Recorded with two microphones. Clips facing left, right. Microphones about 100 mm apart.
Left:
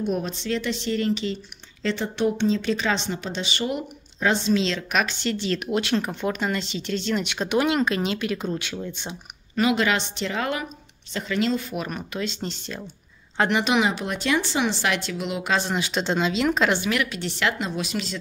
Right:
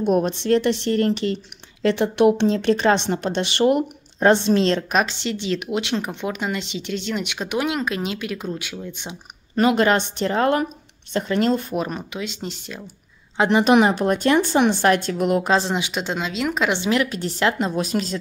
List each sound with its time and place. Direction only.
0.0 s speech: 65° right (ahead or behind)
4.9 s a woman's voice: 30° right (ahead or behind)
5.3 s speech: 15° right (ahead or behind)
9.6 s speech: 40° right (ahead or behind)
11.7 s a woman's voice: 30° right (ahead or behind)
12.1 s speech: 10° right (ahead or behind)
13.7 s speech: 45° right (ahead or behind)
15.7 s speech: 15° right (ahead or behind)
16.7 s a woman's voice: 25° right (ahead or behind)